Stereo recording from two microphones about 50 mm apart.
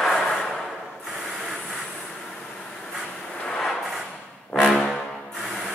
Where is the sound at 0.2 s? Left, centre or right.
Centre.